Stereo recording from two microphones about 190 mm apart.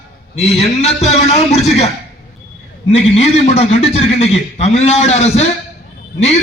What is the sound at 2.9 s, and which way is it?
A man's voice, 35° left (ahead or behind).